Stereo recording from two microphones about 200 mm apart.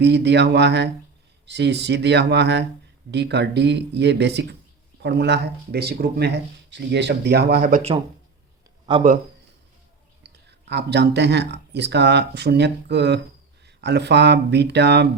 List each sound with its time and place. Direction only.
0.0 s speech: 60° right (ahead or behind)
8.9 s speech: 20° right (ahead or behind)
10.2 s speech: 60° right (ahead or behind)